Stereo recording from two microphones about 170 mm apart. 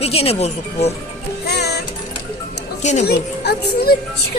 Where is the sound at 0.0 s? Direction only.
35° left (ahead or behind).